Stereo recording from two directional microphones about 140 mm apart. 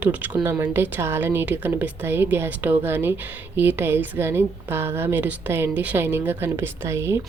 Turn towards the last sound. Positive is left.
turn(degrees=-20)  # may be behind; listen again after turning